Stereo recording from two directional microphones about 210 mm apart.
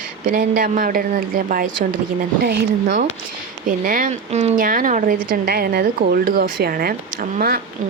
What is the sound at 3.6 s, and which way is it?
Speech, 40° right (ahead or behind).